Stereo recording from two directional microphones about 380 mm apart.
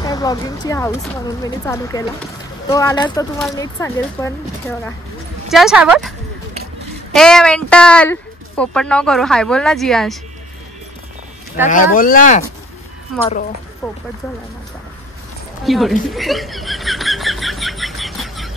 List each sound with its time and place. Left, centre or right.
0.0 s speech: centre
7.2 s speech: centre
11.7 s speech: left
13.8 s speech: centre
15.6 s a sound: centre